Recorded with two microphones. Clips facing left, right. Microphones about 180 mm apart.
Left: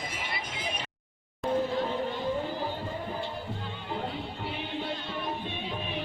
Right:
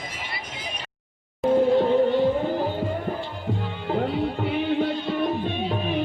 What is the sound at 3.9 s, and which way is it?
Music, 65° right (ahead or behind).